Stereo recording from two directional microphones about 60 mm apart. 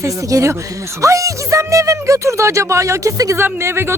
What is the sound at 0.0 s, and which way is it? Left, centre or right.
Speech, right.